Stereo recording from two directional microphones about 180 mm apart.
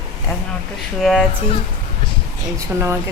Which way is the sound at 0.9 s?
Centre (ahead or behind).